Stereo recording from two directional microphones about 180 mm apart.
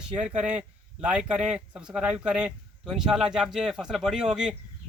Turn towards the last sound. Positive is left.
turn(degrees=-5)  # may be behind; listen again after turning